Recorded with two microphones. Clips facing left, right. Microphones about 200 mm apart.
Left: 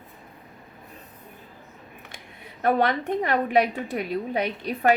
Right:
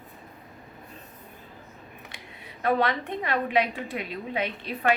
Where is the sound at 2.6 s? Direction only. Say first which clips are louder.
Left 3 dB; 45° left (ahead or behind).